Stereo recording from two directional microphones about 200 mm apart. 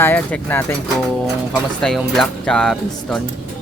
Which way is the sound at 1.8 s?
Centre (ahead or behind).